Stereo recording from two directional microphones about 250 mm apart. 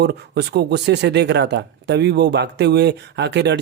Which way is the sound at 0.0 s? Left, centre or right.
Right.